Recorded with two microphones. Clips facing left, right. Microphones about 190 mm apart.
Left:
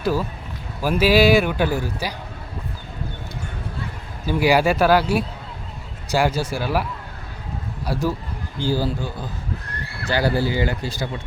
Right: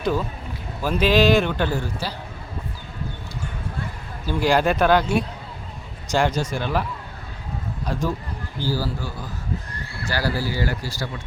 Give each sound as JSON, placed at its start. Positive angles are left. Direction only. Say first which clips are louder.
{"t": 0.0, "sound": "a man's voice", "louder": "left 1 dB", "side_deg": 5}
{"t": 4.3, "sound": "a man's voice", "louder": "left 2 dB", "side_deg": 10}
{"t": 7.9, "sound": "a man's voice", "louder": "left 2 dB", "side_deg": 5}
{"t": 8.6, "sound": "speech", "louder": "left 4 dB", "side_deg": 20}